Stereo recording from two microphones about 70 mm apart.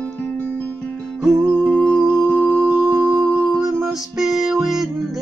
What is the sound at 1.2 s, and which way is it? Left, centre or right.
Music, centre.